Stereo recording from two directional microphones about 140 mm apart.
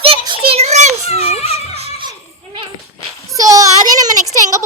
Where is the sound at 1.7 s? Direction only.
45° right (ahead or behind).